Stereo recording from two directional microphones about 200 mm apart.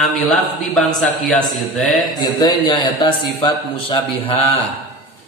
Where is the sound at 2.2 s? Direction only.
20° left (ahead or behind).